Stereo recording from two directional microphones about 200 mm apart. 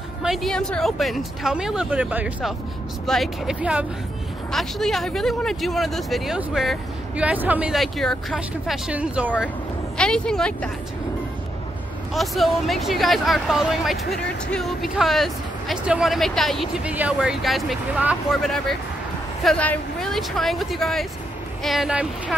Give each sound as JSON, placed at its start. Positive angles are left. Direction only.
{"t": 0.2, "sound": "speech", "side_deg": 0}
{"t": 9.9, "sound": "speech", "side_deg": 5}
{"t": 12.1, "sound": "speech", "side_deg": 0}